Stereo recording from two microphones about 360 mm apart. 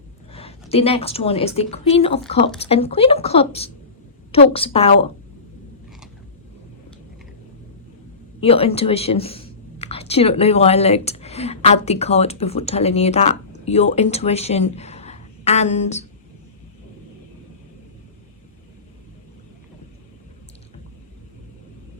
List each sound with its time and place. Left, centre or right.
0.3 s a woman's voice: centre
8.4 s speech: centre